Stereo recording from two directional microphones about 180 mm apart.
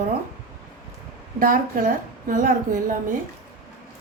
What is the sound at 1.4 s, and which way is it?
A woman's voice, 50° right (ahead or behind).